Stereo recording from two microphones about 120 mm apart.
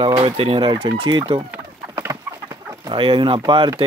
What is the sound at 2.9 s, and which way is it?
Speech, 45° right (ahead or behind).